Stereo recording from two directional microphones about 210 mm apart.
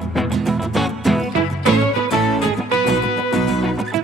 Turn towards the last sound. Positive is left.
turn(degrees=0)  # may be behind; listen again after turning